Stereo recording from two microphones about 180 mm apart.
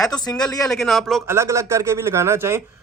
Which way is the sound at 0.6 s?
Centre (ahead or behind).